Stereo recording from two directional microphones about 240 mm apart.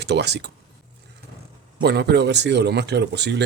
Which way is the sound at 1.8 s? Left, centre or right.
Right.